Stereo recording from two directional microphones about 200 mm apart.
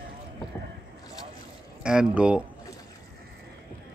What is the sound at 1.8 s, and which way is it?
Speech, 5° right (ahead or behind).